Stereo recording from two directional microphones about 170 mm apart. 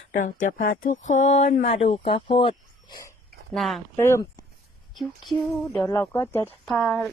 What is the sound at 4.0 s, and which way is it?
Speech, 15° left (ahead or behind).